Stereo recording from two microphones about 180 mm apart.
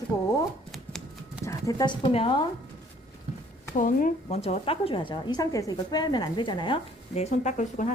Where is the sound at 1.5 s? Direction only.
20° left (ahead or behind).